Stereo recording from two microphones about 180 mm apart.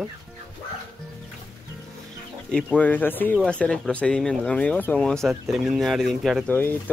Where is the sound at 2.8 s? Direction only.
10° left (ahead or behind).